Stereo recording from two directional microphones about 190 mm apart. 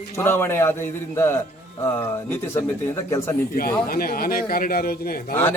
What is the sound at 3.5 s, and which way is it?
A man's voice, 50° left (ahead or behind).